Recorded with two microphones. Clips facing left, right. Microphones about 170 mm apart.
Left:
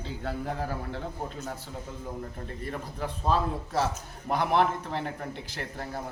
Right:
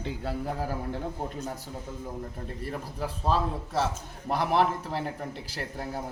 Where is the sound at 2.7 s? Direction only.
Centre (ahead or behind).